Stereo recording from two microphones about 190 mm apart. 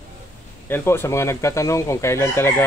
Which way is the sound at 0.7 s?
15° left (ahead or behind).